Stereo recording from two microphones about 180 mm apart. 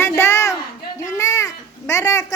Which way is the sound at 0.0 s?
15° left (ahead or behind).